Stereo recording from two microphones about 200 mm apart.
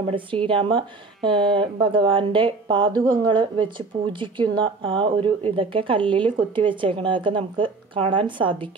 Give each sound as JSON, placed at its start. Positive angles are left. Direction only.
{"t": 0.0, "sound": "speech", "side_deg": -25}